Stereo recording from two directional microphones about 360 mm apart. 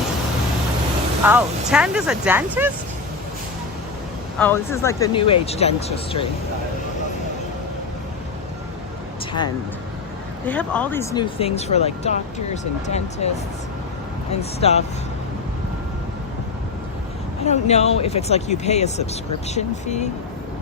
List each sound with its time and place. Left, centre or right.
1.2 s speech: centre
4.4 s speech: centre
10.4 s speech: centre
14.6 s speech: centre
17.4 s speech: centre